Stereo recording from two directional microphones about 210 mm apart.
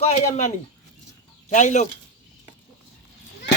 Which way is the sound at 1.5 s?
35° left (ahead or behind).